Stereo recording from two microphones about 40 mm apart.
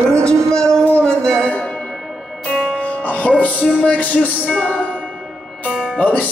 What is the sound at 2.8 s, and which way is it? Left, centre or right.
Music, left.